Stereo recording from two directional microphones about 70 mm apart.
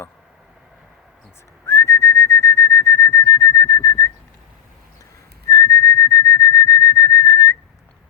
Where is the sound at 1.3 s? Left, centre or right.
Left.